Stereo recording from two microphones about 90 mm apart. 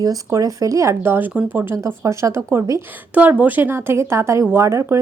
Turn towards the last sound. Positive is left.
turn(degrees=-30)  # may be behind; listen again after turning